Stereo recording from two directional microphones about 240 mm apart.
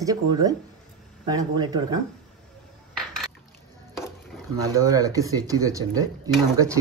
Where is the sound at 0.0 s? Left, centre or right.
Centre.